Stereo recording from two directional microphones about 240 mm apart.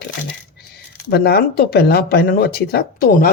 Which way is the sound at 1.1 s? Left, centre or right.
Left.